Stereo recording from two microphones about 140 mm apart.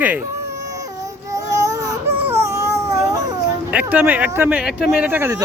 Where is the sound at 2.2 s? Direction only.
20° right (ahead or behind).